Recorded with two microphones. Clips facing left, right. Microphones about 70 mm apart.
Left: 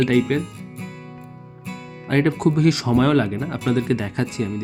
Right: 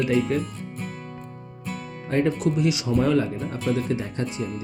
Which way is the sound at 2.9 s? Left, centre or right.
Left.